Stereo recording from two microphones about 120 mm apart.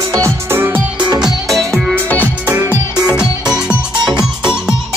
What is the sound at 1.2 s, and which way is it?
Music, centre (ahead or behind).